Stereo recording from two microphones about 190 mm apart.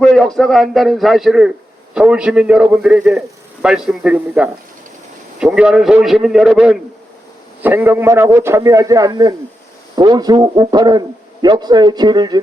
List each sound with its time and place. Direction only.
0.0 s a man's voice: 5° left (ahead or behind); by 12.4 s 20° right (ahead or behind)